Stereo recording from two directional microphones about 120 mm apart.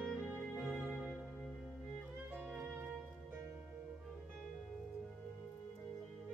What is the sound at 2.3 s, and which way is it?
Music, 15° right (ahead or behind).